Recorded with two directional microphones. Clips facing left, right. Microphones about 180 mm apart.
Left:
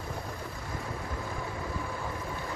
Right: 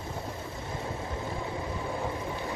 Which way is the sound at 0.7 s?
25° right (ahead or behind).